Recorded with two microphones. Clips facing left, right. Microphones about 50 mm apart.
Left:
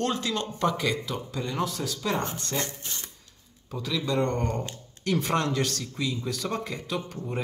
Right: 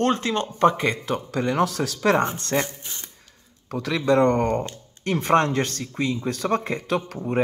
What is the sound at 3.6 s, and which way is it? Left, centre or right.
Speech, right.